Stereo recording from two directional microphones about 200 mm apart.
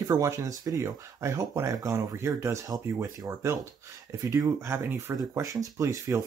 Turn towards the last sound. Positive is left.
turn(degrees=-15)  # may be behind; listen again after turning